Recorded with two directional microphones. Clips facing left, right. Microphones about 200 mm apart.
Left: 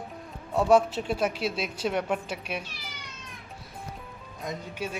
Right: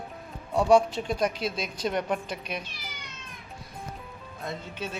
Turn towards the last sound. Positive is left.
turn(degrees=10)  # may be behind; listen again after turning